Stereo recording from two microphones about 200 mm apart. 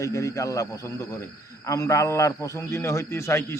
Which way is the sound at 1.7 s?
15° left (ahead or behind).